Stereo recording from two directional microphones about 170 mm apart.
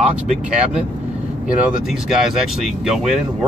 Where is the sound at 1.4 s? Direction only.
Centre (ahead or behind).